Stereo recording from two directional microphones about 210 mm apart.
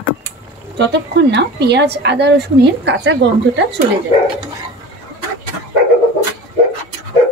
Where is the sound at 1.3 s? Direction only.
55° right (ahead or behind).